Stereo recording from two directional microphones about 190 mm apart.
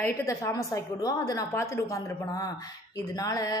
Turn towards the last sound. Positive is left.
turn(degrees=20)  # may be behind; listen again after turning